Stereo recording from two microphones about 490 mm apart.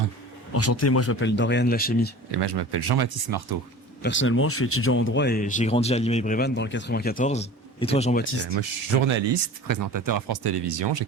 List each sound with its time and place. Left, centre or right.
0.5 s speech: left
2.3 s speech: right
4.0 s speech: left
8.2 s speech: left
8.5 s speech: right